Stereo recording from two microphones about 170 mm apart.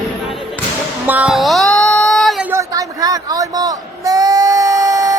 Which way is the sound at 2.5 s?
20° right (ahead or behind).